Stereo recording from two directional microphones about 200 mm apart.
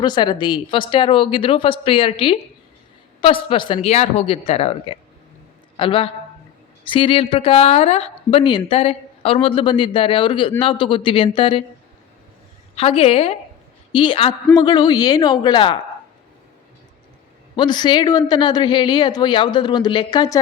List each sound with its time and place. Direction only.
0.0 s a man's voice: 20° left (ahead or behind)
12.7 s speech: 30° left (ahead or behind)
17.6 s speech: 20° left (ahead or behind)